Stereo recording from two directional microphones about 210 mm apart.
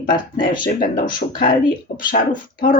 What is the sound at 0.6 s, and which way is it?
Speech, 45° left (ahead or behind).